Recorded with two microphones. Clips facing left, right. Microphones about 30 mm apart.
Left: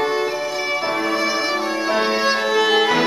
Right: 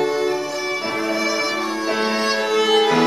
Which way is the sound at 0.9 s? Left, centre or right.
Centre.